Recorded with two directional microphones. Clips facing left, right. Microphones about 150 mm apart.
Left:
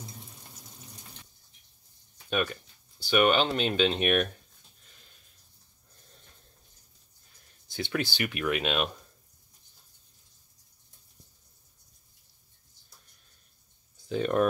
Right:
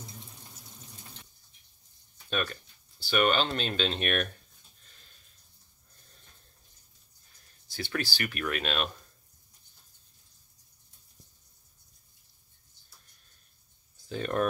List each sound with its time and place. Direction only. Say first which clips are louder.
2.2 s speech: left 3 dB; 15° left (ahead or behind)
7.6 s speech: left 3 dB; 20° left (ahead or behind)
14.0 s speech: left 4 dB; 15° left (ahead or behind)